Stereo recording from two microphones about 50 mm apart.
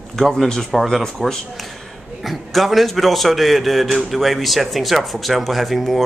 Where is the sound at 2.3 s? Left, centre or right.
Centre.